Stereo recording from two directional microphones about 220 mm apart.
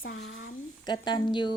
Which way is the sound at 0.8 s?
20° left (ahead or behind).